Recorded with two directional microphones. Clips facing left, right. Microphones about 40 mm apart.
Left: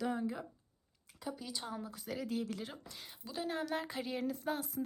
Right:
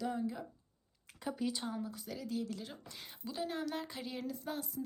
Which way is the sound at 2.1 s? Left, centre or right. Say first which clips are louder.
Left 3 dB; left.